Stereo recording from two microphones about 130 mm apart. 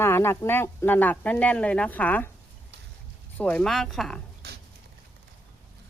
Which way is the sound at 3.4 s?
10° left (ahead or behind).